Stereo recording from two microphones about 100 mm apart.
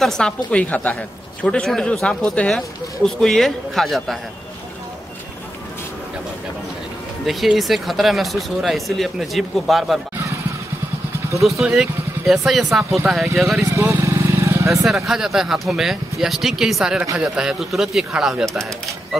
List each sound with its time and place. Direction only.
0.0 s a woman's voice: 5° left (ahead or behind)
7.2 s speech: centre (ahead or behind)
11.4 s speech: centre (ahead or behind)
13.7 s vehicle: 30° right (ahead or behind)
14.9 s speech: 5° right (ahead or behind)